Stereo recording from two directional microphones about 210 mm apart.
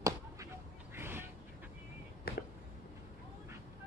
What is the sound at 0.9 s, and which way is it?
Duck, 10° right (ahead or behind).